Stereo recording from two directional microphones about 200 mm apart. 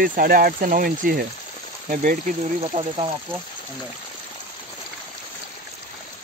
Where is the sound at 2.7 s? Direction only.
25° right (ahead or behind).